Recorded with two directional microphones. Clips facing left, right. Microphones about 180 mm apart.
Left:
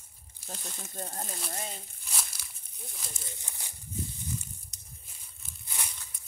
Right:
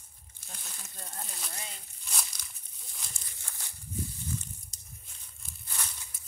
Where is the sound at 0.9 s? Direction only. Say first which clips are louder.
Left 6 dB; 40° left (ahead or behind).